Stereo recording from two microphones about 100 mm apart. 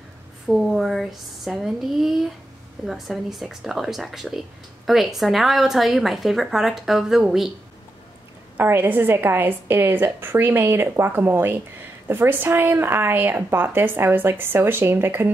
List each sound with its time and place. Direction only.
0.5 s a woman's voice: 5° right (ahead or behind)
8.5 s a woman's voice: 20° right (ahead or behind)